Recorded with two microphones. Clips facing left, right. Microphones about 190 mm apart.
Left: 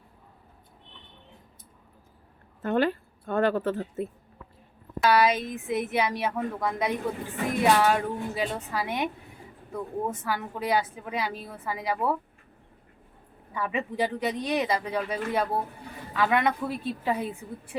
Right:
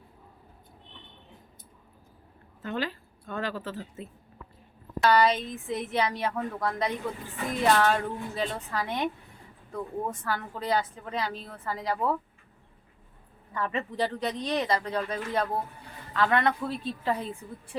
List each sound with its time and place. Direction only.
2.6 s speech: 55° left (ahead or behind)
4.9 s speech: 10° left (ahead or behind)
13.5 s speech: 10° left (ahead or behind)